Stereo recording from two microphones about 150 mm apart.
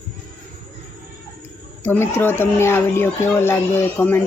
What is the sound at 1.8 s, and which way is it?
Speech, 15° left (ahead or behind).